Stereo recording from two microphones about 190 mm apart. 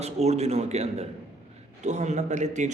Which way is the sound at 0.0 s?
35° right (ahead or behind).